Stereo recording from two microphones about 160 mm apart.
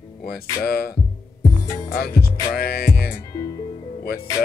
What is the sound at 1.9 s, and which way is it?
Music, 75° left (ahead or behind).